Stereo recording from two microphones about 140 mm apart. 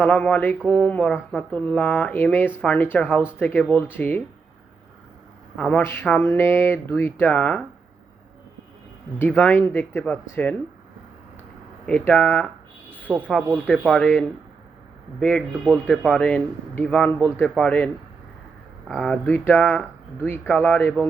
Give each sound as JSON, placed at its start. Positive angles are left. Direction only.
{"t": 0.0, "sound": "speech", "side_deg": 10}
{"t": 5.5, "sound": "speech", "side_deg": 10}
{"t": 9.1, "sound": "speech", "side_deg": 10}
{"t": 11.9, "sound": "speech", "side_deg": 10}
{"t": 13.1, "sound": "speech", "side_deg": -10}
{"t": 13.7, "sound": "speech", "side_deg": 0}